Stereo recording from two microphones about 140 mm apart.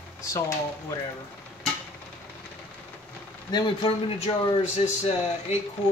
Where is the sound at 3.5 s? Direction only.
35° left (ahead or behind).